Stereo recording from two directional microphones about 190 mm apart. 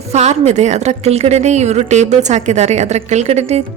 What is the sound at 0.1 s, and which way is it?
Speech, 35° right (ahead or behind).